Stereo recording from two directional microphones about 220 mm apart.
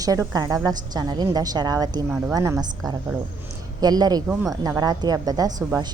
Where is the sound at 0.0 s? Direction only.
15° right (ahead or behind).